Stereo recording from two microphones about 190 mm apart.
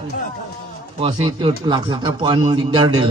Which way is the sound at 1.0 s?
25° right (ahead or behind).